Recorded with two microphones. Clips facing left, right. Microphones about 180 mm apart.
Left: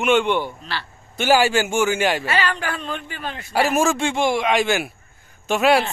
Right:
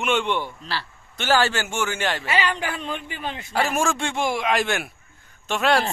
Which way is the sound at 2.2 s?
15° right (ahead or behind).